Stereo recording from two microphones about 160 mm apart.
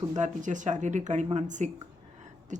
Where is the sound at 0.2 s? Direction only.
50° right (ahead or behind).